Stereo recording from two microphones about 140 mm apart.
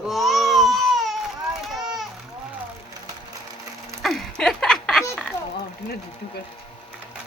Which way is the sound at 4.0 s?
Centre (ahead or behind).